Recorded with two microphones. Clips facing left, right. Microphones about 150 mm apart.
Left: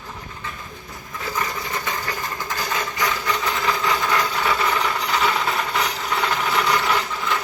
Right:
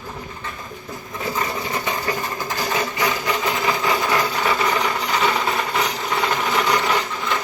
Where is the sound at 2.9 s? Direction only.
20° right (ahead or behind).